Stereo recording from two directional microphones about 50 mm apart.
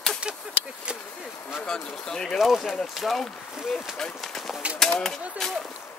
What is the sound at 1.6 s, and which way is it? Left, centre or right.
Speech, centre.